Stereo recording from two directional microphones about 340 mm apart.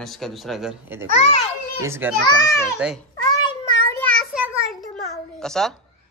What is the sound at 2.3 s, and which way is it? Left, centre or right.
Speech, centre.